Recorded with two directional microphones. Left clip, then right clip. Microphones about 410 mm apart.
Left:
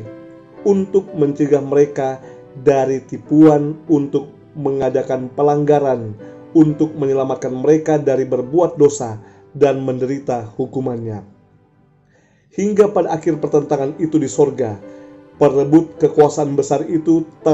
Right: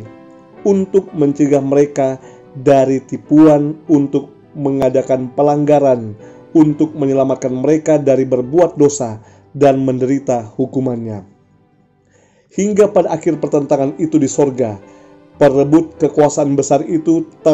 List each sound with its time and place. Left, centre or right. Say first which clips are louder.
0.7 s speech: right 2 dB; centre
12.5 s speech: right 2 dB; right